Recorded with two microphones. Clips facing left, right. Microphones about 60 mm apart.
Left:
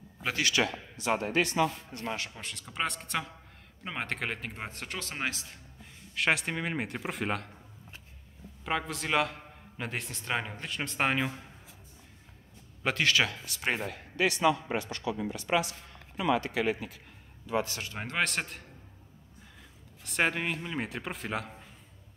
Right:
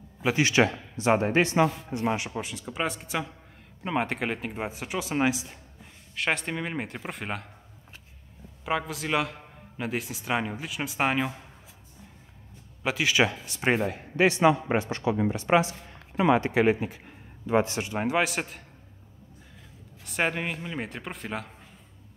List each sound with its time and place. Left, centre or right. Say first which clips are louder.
0.4 s a man's voice: right 6 dB; right
2.5 s a man's voice: right 1 dB; centre
6.1 s a man's voice: even; centre
8.6 s a man's voice: right 3 dB; centre
12.8 s a man's voice: right 1 dB; centre
13.1 s a man's voice: right 4 dB; right
18.0 s a man's voice: right 4 dB; centre
20.1 s a man's voice: right 1 dB; centre